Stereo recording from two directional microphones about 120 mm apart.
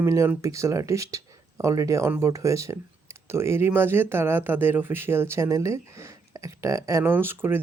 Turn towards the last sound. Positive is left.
turn(degrees=-20)  # may be behind; listen again after turning